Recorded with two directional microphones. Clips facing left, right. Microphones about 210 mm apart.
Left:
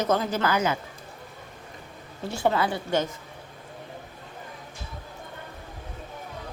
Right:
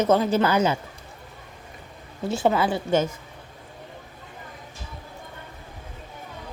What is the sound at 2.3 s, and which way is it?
Speech, 20° right (ahead or behind).